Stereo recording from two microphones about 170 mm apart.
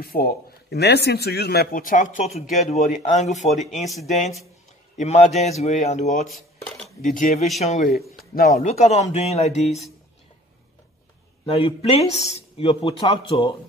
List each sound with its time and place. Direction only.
0.0 s a man's voice: 60° left (ahead or behind); by 3.8 s 45° left (ahead or behind)
3.8 s speech: centre (ahead or behind)
4.9 s a man's voice: 40° left (ahead or behind)
6.2 s dishes: centre (ahead or behind)
7.0 s speech: 50° left (ahead or behind)
8.4 s a man's voice: 60° left (ahead or behind)
8.6 s a man's voice: 40° left (ahead or behind)
11.4 s a man's voice: 35° left (ahead or behind)